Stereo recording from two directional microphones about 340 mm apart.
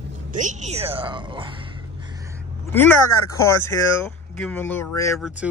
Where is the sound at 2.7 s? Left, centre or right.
Centre.